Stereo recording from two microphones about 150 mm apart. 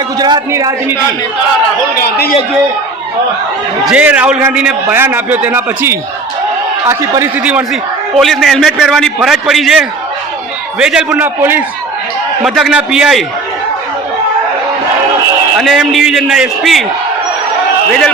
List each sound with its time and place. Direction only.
0.2 s a man's voice: 25° right (ahead or behind)
2.0 s a man's voice: 90° left
3.8 s a man's voice: 10° right (ahead or behind)
12.4 s a man's voice: centre (ahead or behind)
15.5 s a man's voice: centre (ahead or behind)